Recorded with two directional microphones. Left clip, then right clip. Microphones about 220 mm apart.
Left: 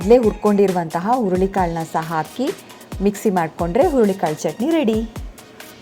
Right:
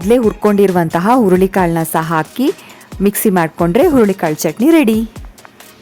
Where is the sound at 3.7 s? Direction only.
50° right (ahead or behind).